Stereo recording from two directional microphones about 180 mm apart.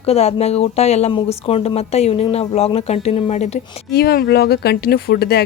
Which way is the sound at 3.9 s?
60° left (ahead or behind).